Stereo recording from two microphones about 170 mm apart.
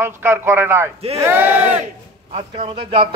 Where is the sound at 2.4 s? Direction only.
30° right (ahead or behind).